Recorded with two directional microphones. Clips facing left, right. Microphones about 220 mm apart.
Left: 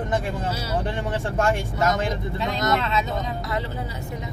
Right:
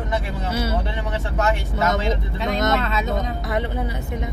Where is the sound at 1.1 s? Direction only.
50° left (ahead or behind).